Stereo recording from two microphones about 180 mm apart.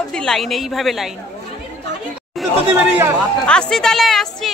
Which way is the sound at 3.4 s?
5° left (ahead or behind).